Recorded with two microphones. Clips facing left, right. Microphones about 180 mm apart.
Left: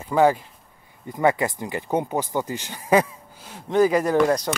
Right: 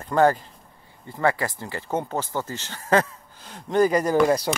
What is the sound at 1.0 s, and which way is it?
Speech, 20° left (ahead or behind).